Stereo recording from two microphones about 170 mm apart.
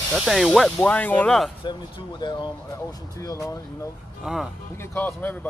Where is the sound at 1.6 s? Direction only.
30° left (ahead or behind).